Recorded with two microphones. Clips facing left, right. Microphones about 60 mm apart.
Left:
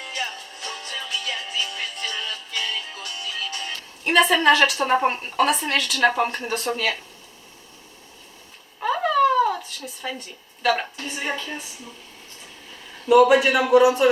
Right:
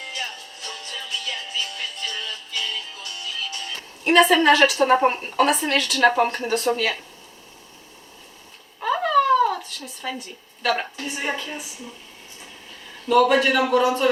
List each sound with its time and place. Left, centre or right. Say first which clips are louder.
0.6 s music: left 2 dB; left
2.3 s music: left 1 dB; left
4.0 s a woman's voice: right 2 dB; centre
8.8 s a sound: even; centre
13.1 s a man's voice: left 2 dB; centre